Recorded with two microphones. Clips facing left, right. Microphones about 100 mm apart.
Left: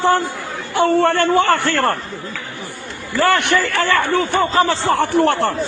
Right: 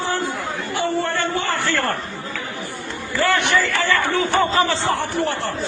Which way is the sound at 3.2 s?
60° left (ahead or behind).